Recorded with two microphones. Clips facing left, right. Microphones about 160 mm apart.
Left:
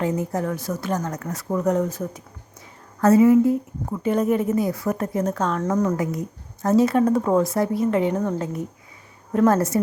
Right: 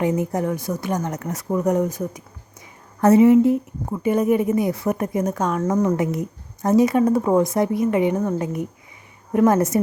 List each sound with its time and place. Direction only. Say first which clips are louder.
0.0 s speech: right 3 dB; 15° right (ahead or behind)